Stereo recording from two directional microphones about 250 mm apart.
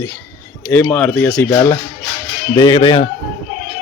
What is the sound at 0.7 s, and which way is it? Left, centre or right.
Speech, centre.